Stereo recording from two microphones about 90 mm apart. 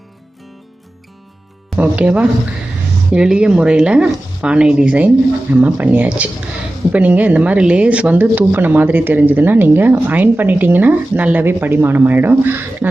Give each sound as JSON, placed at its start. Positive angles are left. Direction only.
{"t": 1.8, "sound": "speech", "side_deg": -15}